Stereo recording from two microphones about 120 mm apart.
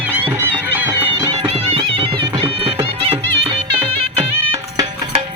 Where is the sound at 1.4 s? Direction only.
55° right (ahead or behind).